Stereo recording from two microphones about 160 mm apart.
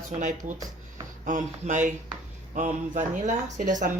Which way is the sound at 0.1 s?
50° right (ahead or behind).